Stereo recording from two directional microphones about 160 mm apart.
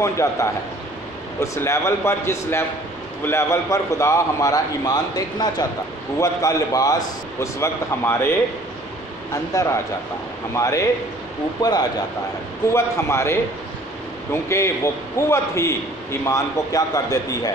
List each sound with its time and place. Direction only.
0.0 s a man's voice: 20° left (ahead or behind)
9.3 s a man's voice: 20° left (ahead or behind)